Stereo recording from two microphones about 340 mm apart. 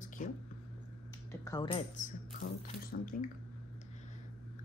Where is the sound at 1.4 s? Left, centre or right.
Centre.